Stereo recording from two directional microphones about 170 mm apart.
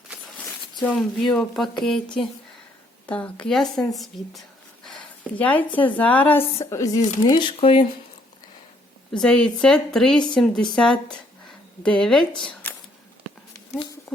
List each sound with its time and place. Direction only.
0.9 s a woman's voice: 5° left (ahead or behind)
7.0 s speech: 45° left (ahead or behind)
7.3 s speech: 30° left (ahead or behind)
9.1 s a woman's voice: 5° left (ahead or behind)
12.4 s a sound: 5° left (ahead or behind)